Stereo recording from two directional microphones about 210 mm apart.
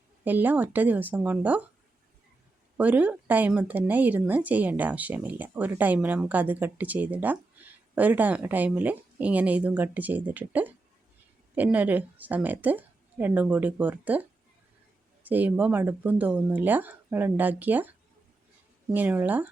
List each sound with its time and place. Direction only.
0.3 s speech: 10° right (ahead or behind)
2.7 s speech: 5° right (ahead or behind)
18.9 s speech: 10° right (ahead or behind)